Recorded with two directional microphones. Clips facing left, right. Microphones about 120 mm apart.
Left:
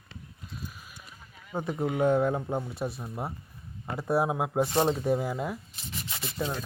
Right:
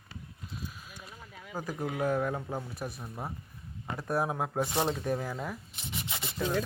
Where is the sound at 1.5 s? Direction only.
25° left (ahead or behind).